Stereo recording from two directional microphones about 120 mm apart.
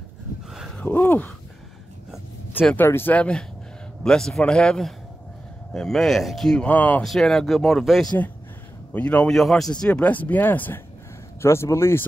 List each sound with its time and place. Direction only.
0.5 s a sound: centre (ahead or behind)
0.7 s speech: 15° left (ahead or behind)
2.6 s speech: 15° left (ahead or behind)
7.1 s speech: 5° left (ahead or behind)
8.9 s speech: 10° left (ahead or behind)